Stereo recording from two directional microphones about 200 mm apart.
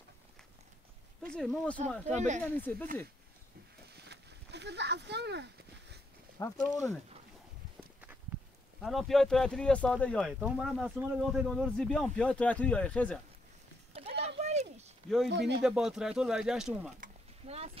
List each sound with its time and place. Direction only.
1.3 s speech: 5° left (ahead or behind)
2.1 s speech: 35° right (ahead or behind)
2.4 s speech: 10° left (ahead or behind)
3.9 s a sound: 55° right (ahead or behind)
6.4 s speech: 15° left (ahead or behind)
8.8 s speech: centre (ahead or behind)
14.4 s a sound: 35° right (ahead or behind)
15.2 s speech: 60° right (ahead or behind)
15.6 s speech: 5° right (ahead or behind)
17.0 s a sound: 30° right (ahead or behind)